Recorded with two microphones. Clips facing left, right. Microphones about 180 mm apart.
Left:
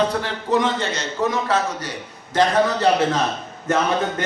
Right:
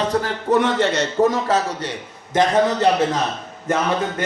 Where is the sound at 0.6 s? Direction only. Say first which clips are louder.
Right 4 dB; 70° right (ahead or behind).